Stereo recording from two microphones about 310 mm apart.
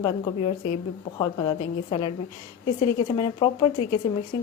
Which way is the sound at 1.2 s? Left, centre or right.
Centre.